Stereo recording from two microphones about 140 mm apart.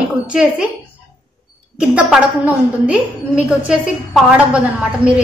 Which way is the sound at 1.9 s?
10° right (ahead or behind).